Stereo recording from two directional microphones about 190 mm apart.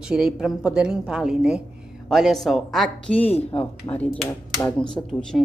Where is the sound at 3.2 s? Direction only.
30° left (ahead or behind).